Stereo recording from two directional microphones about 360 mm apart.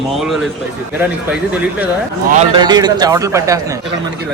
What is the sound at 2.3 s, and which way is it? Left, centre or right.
A man's voice, centre.